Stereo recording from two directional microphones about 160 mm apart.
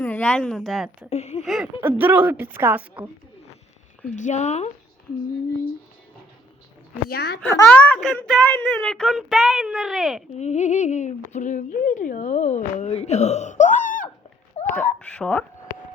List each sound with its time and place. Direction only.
0.0 s speech: 10° left (ahead or behind)
1.1 s a sound: 45° left (ahead or behind)
1.5 s a woman's voice: 5° right (ahead or behind)
4.1 s speech: 50° left (ahead or behind)
7.1 s a child's voice: 80° left
7.4 s a child's voice: 10° left (ahead or behind)
7.9 s speech: centre (ahead or behind)
10.3 s speech: 45° left (ahead or behind)
14.5 s a sound: 45° left (ahead or behind)
14.9 s a child's voice: 5° left (ahead or behind)